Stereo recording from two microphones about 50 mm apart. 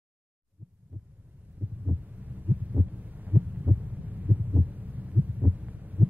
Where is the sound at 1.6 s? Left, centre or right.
Right.